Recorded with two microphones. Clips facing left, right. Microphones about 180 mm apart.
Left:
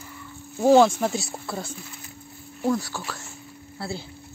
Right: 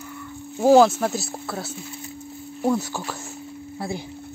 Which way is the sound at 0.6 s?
5° right (ahead or behind).